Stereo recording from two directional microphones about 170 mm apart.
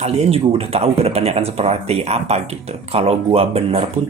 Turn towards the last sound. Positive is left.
turn(degrees=-35)  # may be behind; listen again after turning